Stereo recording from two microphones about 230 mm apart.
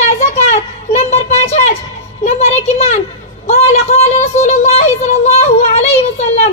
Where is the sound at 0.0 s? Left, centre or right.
Left.